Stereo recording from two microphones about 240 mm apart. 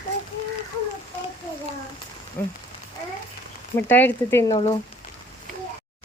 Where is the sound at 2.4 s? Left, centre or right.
Centre.